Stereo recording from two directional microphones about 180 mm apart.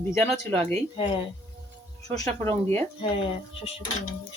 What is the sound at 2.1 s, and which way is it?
Speech, 15° left (ahead or behind).